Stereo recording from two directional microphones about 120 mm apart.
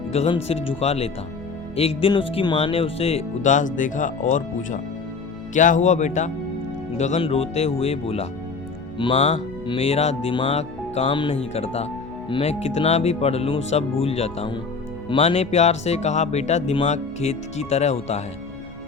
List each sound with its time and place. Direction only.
0.3 s speech: 55° left (ahead or behind); by 7.2 s 75° left (ahead or behind)
7.2 s speech: 55° left (ahead or behind)
9.0 s speech: 45° left (ahead or behind); by 11.0 s 65° left (ahead or behind)
11.0 s speech: 45° left (ahead or behind)
11.5 s speech: 60° left (ahead or behind)